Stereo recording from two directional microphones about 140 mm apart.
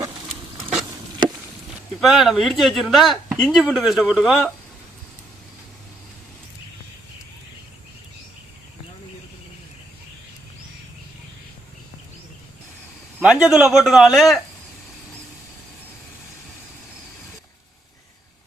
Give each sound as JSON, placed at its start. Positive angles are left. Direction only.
{"t": 1.2, "sound": "chop", "side_deg": -30}
{"t": 2.0, "sound": "speech", "side_deg": 0}
{"t": 13.1, "sound": "speech", "side_deg": -10}